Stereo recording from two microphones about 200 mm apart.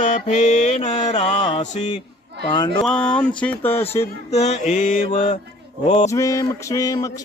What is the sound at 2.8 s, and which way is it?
Speech, 5° left (ahead or behind).